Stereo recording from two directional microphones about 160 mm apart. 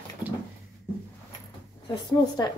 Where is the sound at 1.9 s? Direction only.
25° left (ahead or behind).